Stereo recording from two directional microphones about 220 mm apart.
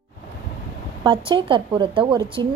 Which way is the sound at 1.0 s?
20° right (ahead or behind).